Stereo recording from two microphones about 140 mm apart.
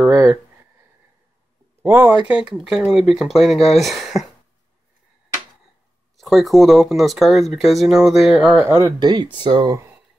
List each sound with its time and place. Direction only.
0.1 s speech: 20° right (ahead or behind)
1.8 s speech: 15° right (ahead or behind)
6.1 s speech: centre (ahead or behind); by 9.8 s 30° right (ahead or behind)